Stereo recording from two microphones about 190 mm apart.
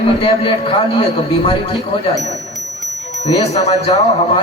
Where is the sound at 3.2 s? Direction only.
35° left (ahead or behind).